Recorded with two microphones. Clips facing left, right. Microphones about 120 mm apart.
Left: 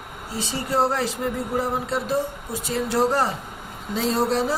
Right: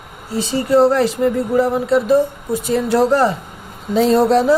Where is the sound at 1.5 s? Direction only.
75° right (ahead or behind).